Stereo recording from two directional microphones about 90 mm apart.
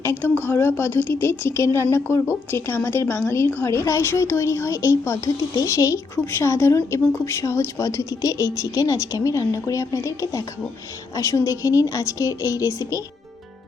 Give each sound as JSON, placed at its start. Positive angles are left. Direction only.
{"t": 0.0, "sound": "a woman's voice", "side_deg": 25}